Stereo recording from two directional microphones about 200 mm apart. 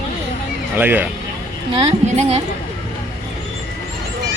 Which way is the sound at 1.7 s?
30° right (ahead or behind).